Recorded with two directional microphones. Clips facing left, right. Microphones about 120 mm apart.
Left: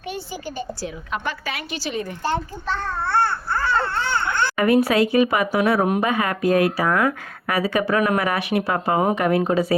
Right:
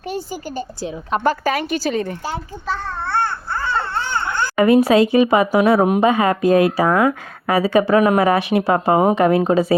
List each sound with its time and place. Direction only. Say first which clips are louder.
1.1 s a woman's voice: right 11 dB; 40° right (ahead or behind)
2.2 s babbling: left 1 dB; 10° right (ahead or behind)
4.4 s speech: right 5 dB; 25° right (ahead or behind)